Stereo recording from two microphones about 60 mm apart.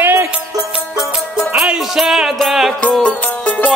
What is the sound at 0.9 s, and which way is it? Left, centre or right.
Music, centre.